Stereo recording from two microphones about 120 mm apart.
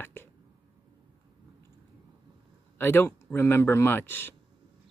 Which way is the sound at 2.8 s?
20° left (ahead or behind).